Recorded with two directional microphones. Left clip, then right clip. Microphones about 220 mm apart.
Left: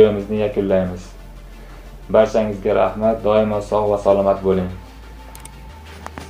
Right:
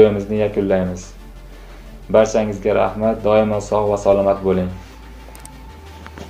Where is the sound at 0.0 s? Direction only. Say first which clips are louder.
Right 1 dB; 15° right (ahead or behind).